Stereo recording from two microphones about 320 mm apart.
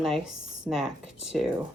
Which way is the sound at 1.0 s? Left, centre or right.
Left.